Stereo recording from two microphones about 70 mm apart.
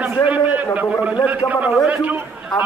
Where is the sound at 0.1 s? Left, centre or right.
Right.